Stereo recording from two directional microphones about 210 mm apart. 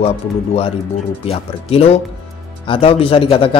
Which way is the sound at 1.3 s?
30° left (ahead or behind).